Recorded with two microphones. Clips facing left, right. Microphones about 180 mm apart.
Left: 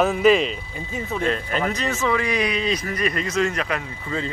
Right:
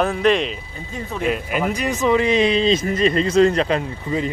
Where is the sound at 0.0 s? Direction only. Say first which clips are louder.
Left 1 dB; 5° left (ahead or behind).